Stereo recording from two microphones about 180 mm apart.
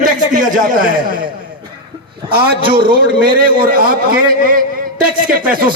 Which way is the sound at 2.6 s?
30° right (ahead or behind).